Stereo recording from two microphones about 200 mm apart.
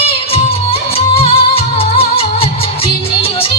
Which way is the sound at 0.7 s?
30° left (ahead or behind).